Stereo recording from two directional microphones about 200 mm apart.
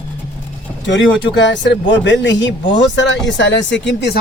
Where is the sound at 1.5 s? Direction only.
60° left (ahead or behind).